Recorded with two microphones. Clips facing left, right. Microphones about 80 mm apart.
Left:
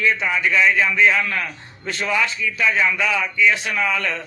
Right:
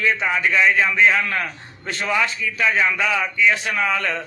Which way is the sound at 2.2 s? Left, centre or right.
Right.